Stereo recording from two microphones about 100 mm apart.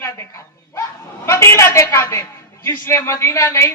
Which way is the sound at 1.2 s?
30° left (ahead or behind).